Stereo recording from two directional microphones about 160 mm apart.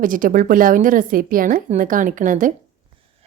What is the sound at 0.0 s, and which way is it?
A woman's voice, 60° right (ahead or behind).